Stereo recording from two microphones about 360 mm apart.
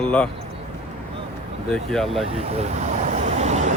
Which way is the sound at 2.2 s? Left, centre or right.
Centre.